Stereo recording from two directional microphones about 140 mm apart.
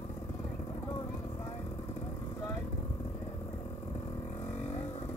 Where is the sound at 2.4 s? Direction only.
25° left (ahead or behind).